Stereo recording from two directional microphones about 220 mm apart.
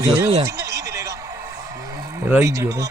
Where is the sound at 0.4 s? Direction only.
15° right (ahead or behind).